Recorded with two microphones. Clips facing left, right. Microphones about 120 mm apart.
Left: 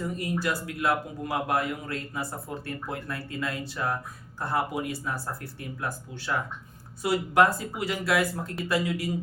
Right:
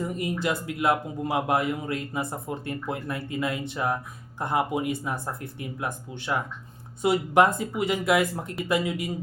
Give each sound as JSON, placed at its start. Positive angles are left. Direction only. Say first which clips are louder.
{"t": 0.0, "sound": "a man's voice", "louder": "right 1 dB", "side_deg": -20}